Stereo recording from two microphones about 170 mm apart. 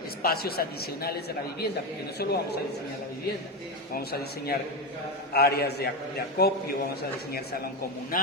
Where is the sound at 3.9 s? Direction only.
65° left (ahead or behind).